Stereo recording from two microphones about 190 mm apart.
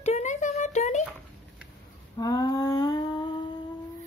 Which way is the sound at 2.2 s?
20° left (ahead or behind).